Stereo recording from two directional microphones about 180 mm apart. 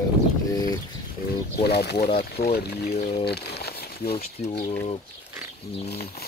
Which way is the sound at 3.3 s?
65° left (ahead or behind).